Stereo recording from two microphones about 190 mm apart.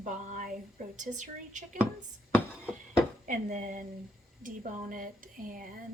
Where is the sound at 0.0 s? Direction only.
40° right (ahead or behind).